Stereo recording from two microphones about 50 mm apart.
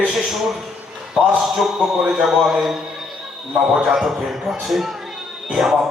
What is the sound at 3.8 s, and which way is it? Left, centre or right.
Speech, centre.